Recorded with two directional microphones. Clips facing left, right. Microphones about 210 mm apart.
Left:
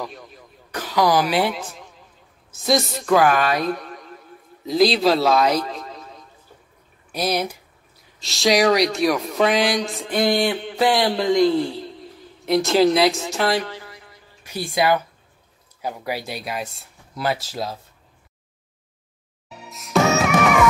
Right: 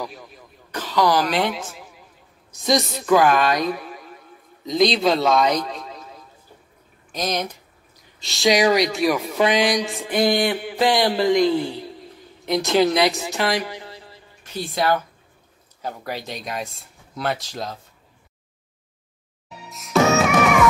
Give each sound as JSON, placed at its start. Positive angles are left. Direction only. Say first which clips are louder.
{"t": 0.0, "sound": "speech", "louder": "even", "side_deg": 0}
{"t": 0.7, "sound": "a woman's voice", "louder": "left 1 dB", "side_deg": 10}
{"t": 1.6, "sound": "a man's voice", "louder": "even", "side_deg": 0}
{"t": 7.1, "sound": "speech", "louder": "left 2 dB", "side_deg": 10}
{"t": 10.3, "sound": "mantra", "louder": "even", "side_deg": 0}
{"t": 10.8, "sound": "speech", "louder": "even", "side_deg": 0}
{"t": 13.6, "sound": "a woman's voice", "louder": "left 1 dB", "side_deg": -15}
{"t": 13.8, "sound": "a sound", "louder": "right 3 dB", "side_deg": -30}
{"t": 14.4, "sound": "speech", "louder": "left 2 dB", "side_deg": 10}
{"t": 19.7, "sound": "music", "louder": "right 1 dB", "side_deg": 0}